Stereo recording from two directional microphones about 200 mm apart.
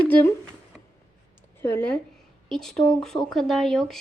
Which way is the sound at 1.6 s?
10° left (ahead or behind).